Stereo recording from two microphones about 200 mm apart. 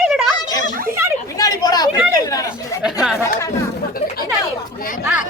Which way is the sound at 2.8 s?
5° right (ahead or behind).